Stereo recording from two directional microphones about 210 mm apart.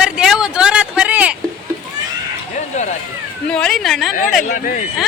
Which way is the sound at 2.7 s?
35° left (ahead or behind).